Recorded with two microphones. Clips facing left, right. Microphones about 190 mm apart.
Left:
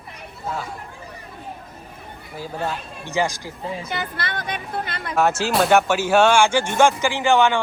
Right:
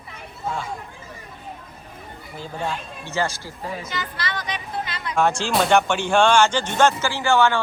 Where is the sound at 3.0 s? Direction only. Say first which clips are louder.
Left 3 dB; 15° left (ahead or behind).